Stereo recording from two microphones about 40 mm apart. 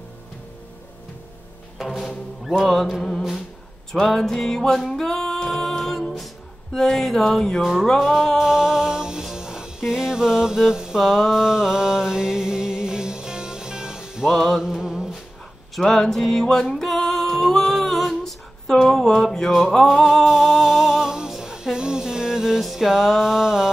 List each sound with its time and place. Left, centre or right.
1.9 s music: centre
5.0 s music: centre
6.7 s a sound: centre
7.2 s music: centre
8.4 s music: centre
14.3 s a sound: centre
14.7 s a sound: centre
15.7 s music: centre
19.0 s music: centre
20.2 s music: centre
22.6 s music: centre
22.8 s a sound: centre